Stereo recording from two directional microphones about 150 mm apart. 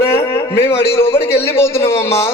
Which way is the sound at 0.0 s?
15° left (ahead or behind).